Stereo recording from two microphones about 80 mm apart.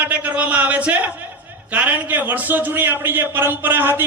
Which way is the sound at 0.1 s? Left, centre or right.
Centre.